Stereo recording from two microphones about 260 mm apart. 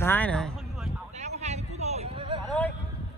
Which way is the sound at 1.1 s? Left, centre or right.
Right.